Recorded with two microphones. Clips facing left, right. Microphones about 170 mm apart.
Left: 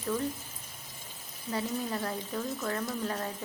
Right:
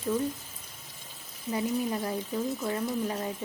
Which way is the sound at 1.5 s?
15° right (ahead or behind).